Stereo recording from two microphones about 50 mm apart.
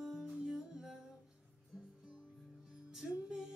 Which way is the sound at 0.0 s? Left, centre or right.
Centre.